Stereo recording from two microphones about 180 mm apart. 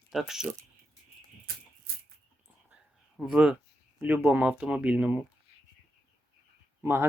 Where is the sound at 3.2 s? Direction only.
5° right (ahead or behind).